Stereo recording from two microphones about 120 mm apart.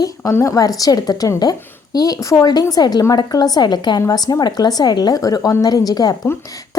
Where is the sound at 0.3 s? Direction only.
25° left (ahead or behind).